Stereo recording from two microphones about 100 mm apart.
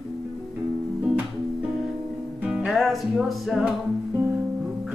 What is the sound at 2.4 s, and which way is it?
Music, 5° right (ahead or behind).